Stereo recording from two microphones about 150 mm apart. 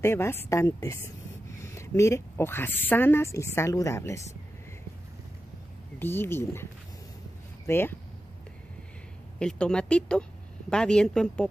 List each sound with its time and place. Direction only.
0.0 s a woman's voice: 15° left (ahead or behind)
5.9 s speech: 15° left (ahead or behind)
9.4 s speech: 5° left (ahead or behind)